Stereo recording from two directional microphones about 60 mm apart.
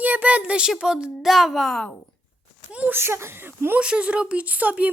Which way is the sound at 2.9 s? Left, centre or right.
Right.